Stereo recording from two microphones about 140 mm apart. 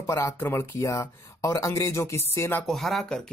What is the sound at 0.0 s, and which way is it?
Speech, 20° left (ahead or behind).